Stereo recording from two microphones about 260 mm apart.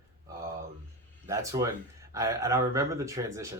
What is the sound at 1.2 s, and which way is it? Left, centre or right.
Speech, centre.